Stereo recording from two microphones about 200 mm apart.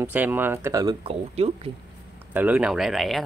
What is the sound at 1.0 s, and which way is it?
Speech, 30° right (ahead or behind).